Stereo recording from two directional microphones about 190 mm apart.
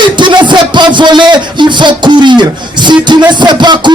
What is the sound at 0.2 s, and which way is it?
A man's voice, 25° right (ahead or behind).